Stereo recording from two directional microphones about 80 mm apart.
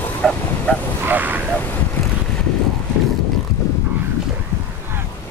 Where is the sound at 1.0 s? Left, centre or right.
Right.